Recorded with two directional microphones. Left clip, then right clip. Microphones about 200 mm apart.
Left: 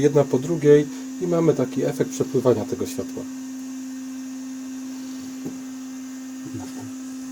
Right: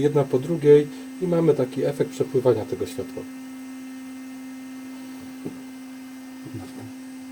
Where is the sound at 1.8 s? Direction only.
25° left (ahead or behind).